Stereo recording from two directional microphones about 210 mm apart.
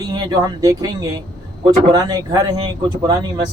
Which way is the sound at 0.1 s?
20° right (ahead or behind).